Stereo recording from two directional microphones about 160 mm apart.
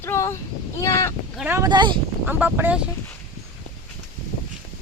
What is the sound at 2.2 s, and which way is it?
Speech, 10° right (ahead or behind).